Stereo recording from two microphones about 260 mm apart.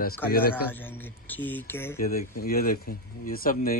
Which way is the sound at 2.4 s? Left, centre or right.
Left.